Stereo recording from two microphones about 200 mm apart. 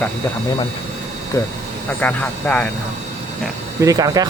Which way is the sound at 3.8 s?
15° right (ahead or behind).